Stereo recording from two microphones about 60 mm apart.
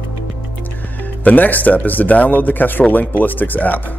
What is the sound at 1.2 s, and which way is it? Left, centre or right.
Speech, left.